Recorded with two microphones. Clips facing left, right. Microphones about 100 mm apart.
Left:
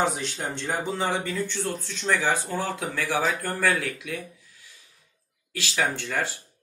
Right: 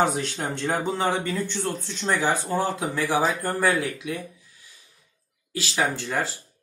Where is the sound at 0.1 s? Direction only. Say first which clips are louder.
Right 3 dB; 50° right (ahead or behind).